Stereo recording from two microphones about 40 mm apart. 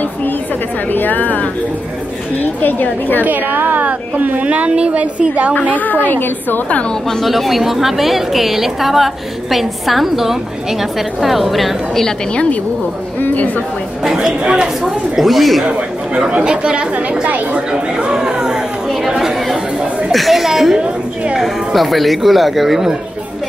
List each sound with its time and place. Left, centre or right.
0.9 s a woman's voice: left
2.6 s a woman's voice: left
3.3 s a woman's voice: right
5.5 s a woman's voice: left
7.1 s a woman's voice: centre
13.2 s speech: left
14.0 s speech: centre
14.4 s speech: right
14.8 s a woman's voice: centre
16.2 s speech: right
17.6 s chatter: right; by 20.7 s centre
20.7 s chatter: right
21.4 s a woman's voice: centre